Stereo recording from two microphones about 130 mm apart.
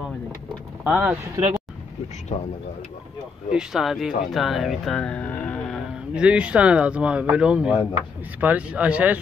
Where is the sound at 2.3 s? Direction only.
50° left (ahead or behind).